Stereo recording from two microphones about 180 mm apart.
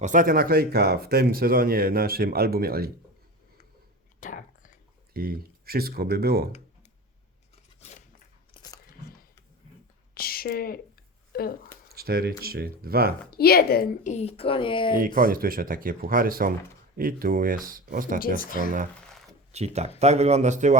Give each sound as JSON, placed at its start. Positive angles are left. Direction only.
{"t": 0.0, "sound": "speech", "side_deg": -45}
{"t": 4.2, "sound": "whispering", "side_deg": 45}
{"t": 5.1, "sound": "speech", "side_deg": -55}
{"t": 7.8, "sound": "scissors", "side_deg": 35}
{"t": 8.5, "sound": "biting", "side_deg": 20}
{"t": 10.2, "sound": "speech", "side_deg": 55}
{"t": 11.3, "sound": "a sound", "side_deg": 55}
{"t": 11.9, "sound": "speech", "side_deg": -55}
{"t": 13.3, "sound": "a woman's voice", "side_deg": 60}
{"t": 14.9, "sound": "speech", "side_deg": -50}
{"t": 18.3, "sound": "speech", "side_deg": 50}
{"t": 19.5, "sound": "speech", "side_deg": -35}